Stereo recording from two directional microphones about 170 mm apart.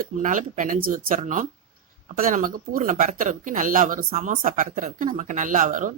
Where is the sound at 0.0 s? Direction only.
50° right (ahead or behind).